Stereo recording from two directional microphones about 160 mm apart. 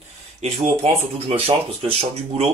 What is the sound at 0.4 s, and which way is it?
Speech, 40° right (ahead or behind).